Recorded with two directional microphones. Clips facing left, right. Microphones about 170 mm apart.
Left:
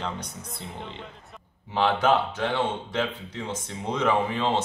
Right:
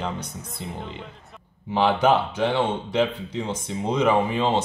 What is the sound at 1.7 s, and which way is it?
Speech, 15° right (ahead or behind).